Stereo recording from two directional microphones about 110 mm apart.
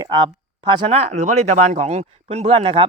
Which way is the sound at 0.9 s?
80° right.